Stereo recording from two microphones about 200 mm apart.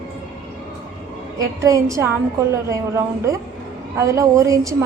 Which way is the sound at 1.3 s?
15° right (ahead or behind).